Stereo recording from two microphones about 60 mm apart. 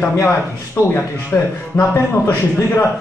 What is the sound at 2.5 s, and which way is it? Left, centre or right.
Speech, left.